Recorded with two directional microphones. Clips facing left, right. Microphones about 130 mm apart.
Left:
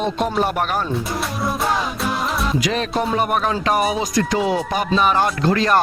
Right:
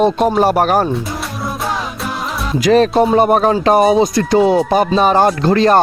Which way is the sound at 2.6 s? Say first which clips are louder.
Right 10 dB; 40° right (ahead or behind).